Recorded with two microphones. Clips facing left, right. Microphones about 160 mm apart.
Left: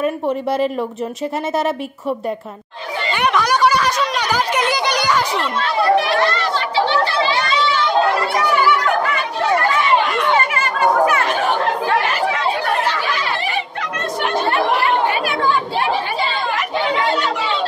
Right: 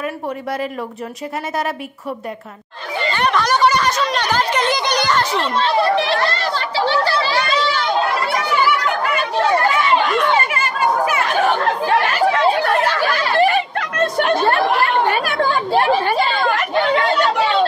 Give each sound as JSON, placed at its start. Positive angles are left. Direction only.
{"t": 0.0, "sound": "speech", "side_deg": 25}
{"t": 3.1, "sound": "speech", "side_deg": 10}
{"t": 5.4, "sound": "a child's voice", "side_deg": -30}
{"t": 13.0, "sound": "chatter", "side_deg": -50}